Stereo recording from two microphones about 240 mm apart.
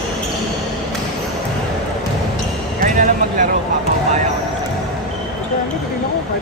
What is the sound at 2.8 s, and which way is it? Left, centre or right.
Basketball bounce, right.